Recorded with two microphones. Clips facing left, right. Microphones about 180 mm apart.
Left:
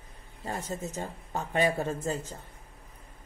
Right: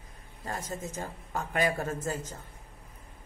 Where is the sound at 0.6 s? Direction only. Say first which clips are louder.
Left 2 dB; 35° left (ahead or behind).